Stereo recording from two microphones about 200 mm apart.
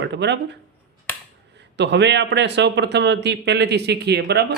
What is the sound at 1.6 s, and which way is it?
Speech, 60° right (ahead or behind).